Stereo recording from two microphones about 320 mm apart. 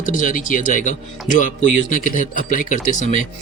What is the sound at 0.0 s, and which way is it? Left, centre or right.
Speech, left.